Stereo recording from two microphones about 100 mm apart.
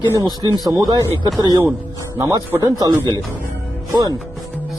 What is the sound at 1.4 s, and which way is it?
Speech, 45° right (ahead or behind).